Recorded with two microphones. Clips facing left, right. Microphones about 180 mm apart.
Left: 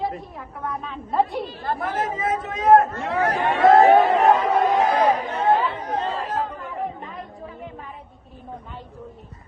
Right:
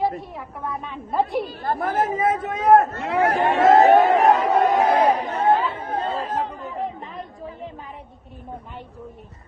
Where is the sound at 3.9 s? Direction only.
Centre (ahead or behind).